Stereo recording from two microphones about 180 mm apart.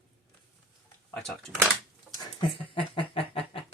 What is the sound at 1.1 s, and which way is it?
Speech, centre (ahead or behind).